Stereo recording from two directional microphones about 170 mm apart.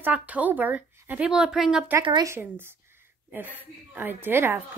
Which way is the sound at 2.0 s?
20° right (ahead or behind).